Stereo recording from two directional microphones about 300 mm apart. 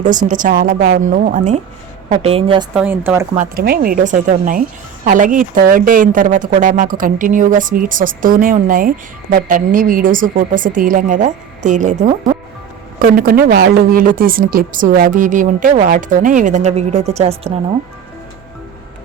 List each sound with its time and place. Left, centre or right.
0.0 s speech: right
2.7 s speech: centre
3.3 s speech: right